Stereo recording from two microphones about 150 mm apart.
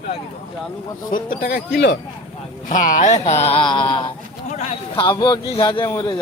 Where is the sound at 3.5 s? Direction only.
35° left (ahead or behind).